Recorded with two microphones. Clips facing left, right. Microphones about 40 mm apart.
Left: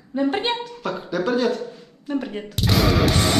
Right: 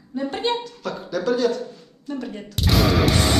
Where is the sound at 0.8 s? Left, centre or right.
Centre.